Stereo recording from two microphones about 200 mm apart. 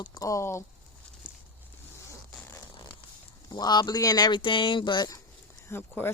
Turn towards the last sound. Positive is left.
turn(degrees=10)  # may be behind; listen again after turning